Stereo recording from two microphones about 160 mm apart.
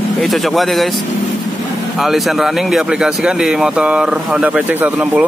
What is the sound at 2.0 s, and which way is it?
A man's voice, centre (ahead or behind).